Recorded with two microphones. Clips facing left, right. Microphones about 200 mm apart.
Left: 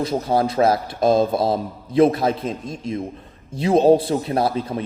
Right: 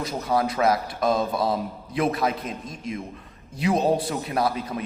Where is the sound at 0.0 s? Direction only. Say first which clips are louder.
Left 5 dB; 25° left (ahead or behind).